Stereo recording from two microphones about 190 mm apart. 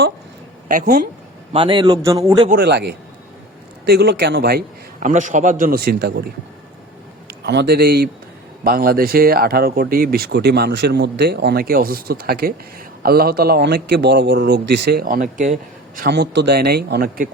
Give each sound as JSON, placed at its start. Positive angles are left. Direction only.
{"t": 0.7, "sound": "speech", "side_deg": -45}
{"t": 1.5, "sound": "a man's voice", "side_deg": -25}
{"t": 2.5, "sound": "a man's voice", "side_deg": -55}
{"t": 4.9, "sound": "speech", "side_deg": -40}
{"t": 7.4, "sound": "a man's voice", "side_deg": -60}
{"t": 16.0, "sound": "a man's voice", "side_deg": -60}